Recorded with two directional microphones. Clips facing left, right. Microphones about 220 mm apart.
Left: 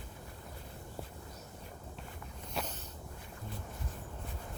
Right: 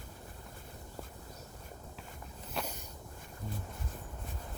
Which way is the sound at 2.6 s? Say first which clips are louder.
Even; centre (ahead or behind).